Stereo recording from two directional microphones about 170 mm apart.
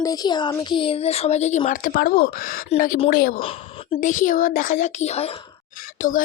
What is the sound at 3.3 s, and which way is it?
Speech, 35° left (ahead or behind).